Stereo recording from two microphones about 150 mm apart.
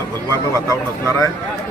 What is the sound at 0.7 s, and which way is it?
Speech, 20° left (ahead or behind).